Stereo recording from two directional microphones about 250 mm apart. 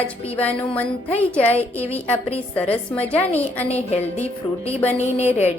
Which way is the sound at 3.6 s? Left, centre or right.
Left.